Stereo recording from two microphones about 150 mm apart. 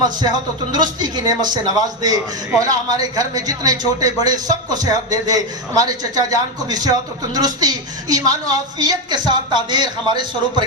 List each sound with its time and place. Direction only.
0.0 s a man's voice: 25° right (ahead or behind)